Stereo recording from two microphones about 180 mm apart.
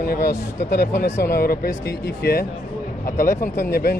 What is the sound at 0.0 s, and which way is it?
Speech, 60° left (ahead or behind).